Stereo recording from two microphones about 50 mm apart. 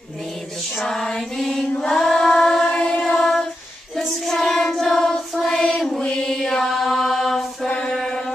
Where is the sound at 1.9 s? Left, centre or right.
Centre.